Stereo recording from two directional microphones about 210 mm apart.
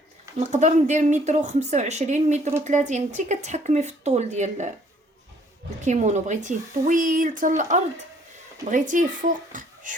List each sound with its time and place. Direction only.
0.3 s speech: 35° right (ahead or behind)
5.8 s speech: 35° right (ahead or behind)